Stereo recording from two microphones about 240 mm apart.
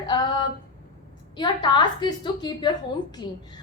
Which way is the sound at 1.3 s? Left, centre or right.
Centre.